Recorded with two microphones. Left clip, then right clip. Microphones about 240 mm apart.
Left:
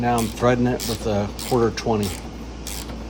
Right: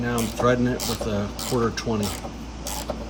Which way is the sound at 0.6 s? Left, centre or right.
Left.